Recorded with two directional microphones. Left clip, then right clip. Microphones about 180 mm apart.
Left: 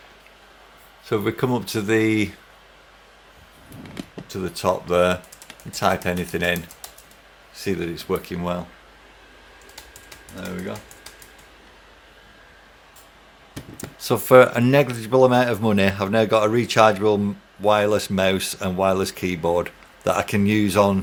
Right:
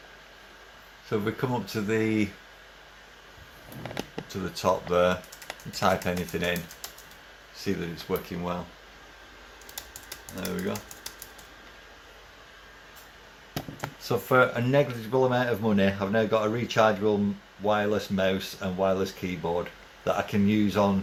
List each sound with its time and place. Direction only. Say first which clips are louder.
1.1 s speech: left 6 dB; 60° left (ahead or behind)
4.3 s speech: left 4 dB; 35° left (ahead or behind); by 8.2 s 55° left (ahead or behind)
10.3 s speech: left 1 dB; centre (ahead or behind)
14.0 s speech: left 9 dB; 65° left (ahead or behind)